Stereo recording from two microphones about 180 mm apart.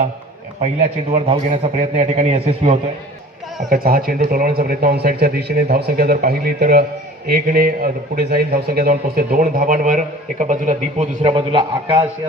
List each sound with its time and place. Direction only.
0.6 s a man's voice: 35° right (ahead or behind)
3.7 s a man's voice: 55° right (ahead or behind); by 12.0 s 30° right (ahead or behind)